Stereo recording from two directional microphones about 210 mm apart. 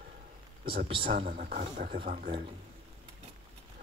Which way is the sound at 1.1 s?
45° right (ahead or behind).